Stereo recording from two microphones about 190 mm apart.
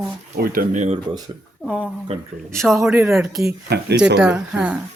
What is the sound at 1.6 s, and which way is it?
Speech, centre (ahead or behind).